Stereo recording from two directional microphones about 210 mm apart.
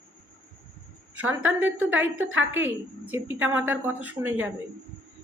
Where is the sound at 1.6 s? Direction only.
10° right (ahead or behind).